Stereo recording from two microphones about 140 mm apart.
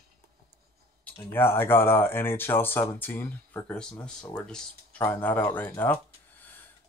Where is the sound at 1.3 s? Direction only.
15° left (ahead or behind).